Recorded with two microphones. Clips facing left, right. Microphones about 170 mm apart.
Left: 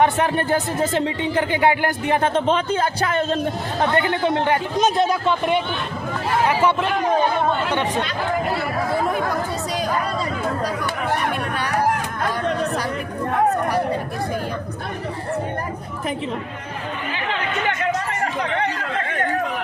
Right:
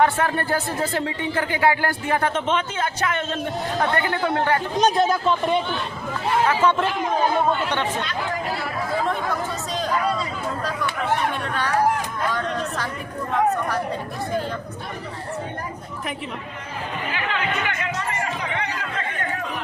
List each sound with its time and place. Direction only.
0.0 s speech: 20° left (ahead or behind); by 3.4 s 35° left (ahead or behind)
3.8 s speech: 25° left (ahead or behind)
4.8 s speech: centre (ahead or behind)
6.5 s a man's voice: 10° left (ahead or behind)